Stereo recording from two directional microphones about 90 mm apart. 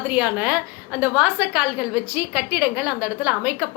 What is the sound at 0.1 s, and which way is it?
A woman's voice, 15° right (ahead or behind).